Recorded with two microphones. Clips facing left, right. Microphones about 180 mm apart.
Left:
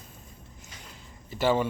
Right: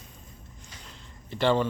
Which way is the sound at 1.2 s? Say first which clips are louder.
Right 1 dB; 5° left (ahead or behind).